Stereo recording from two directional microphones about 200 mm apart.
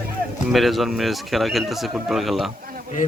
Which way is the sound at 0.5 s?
Centre (ahead or behind).